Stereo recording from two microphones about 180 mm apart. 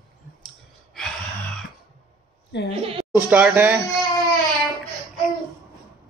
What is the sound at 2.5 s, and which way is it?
Speech, 70° left (ahead or behind).